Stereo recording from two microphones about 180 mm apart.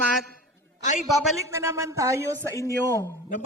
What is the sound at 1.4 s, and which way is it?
Speech, 15° right (ahead or behind).